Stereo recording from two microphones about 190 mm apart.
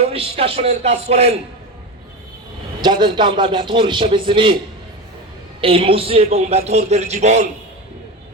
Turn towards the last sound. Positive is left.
turn(degrees=-35)  # may be behind; listen again after turning